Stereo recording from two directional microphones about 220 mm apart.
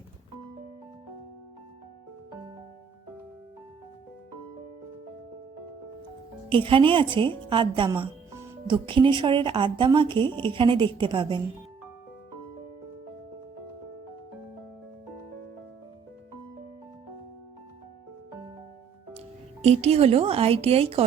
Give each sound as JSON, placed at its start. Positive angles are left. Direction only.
{"t": 6.5, "sound": "a woman's voice", "side_deg": -25}
{"t": 19.6, "sound": "a woman's voice", "side_deg": -30}